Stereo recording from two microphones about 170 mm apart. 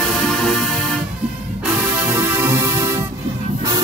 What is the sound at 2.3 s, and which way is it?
Music, 15° right (ahead or behind).